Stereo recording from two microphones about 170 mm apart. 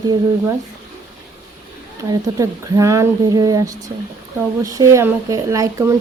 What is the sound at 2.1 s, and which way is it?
Speech, 20° right (ahead or behind).